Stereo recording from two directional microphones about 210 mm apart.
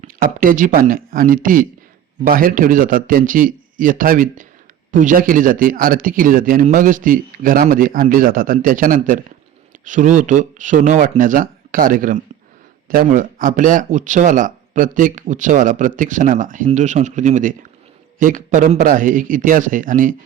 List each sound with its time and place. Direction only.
0.0 s speech: 40° right (ahead or behind)